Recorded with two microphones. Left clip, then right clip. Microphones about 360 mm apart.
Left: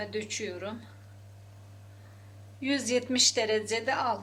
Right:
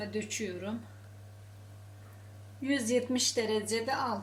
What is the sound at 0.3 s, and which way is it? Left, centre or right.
Speech, left.